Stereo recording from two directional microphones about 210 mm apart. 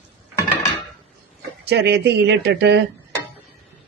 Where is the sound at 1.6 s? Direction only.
50° right (ahead or behind).